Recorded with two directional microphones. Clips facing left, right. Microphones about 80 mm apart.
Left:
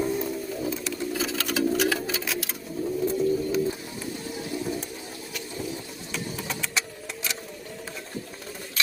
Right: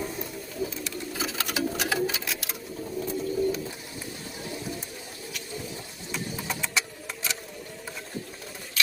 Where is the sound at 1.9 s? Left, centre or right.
Centre.